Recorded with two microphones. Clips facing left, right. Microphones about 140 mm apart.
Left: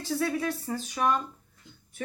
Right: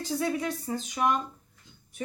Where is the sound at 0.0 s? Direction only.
20° right (ahead or behind).